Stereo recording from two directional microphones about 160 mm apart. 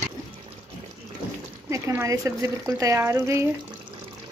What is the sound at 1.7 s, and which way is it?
Speech, 20° right (ahead or behind).